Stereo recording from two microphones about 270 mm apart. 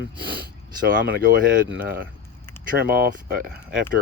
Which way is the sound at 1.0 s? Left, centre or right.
Right.